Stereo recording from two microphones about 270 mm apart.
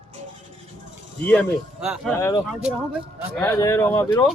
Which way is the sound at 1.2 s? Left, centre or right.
Centre.